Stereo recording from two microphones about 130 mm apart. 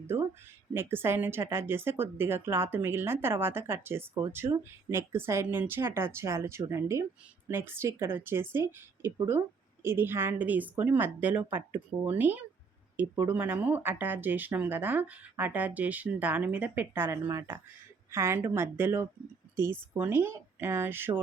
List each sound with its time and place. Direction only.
0.7 s speech: 15° right (ahead or behind)